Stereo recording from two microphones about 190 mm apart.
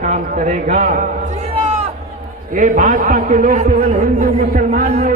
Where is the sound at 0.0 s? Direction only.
40° right (ahead or behind).